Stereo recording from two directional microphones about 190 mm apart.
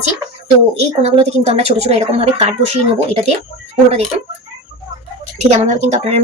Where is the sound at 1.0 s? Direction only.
35° right (ahead or behind).